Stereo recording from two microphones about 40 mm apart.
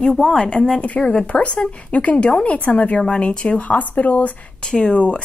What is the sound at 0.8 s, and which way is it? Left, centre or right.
Speech, left.